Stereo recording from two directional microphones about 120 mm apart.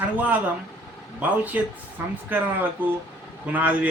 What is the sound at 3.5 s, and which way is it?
Speech, 15° right (ahead or behind).